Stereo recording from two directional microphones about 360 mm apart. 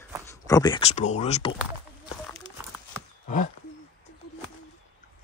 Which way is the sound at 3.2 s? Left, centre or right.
Left.